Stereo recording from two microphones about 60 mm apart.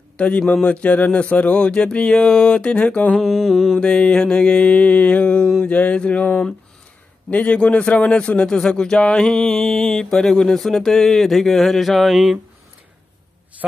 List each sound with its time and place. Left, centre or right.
0.2 s speech: left
3.2 s speech: centre
3.7 s speech: centre
7.2 s speech: left; by 12.4 s centre